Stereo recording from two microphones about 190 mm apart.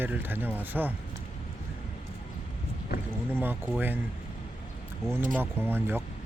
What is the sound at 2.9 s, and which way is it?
Vehicle, 55° left (ahead or behind).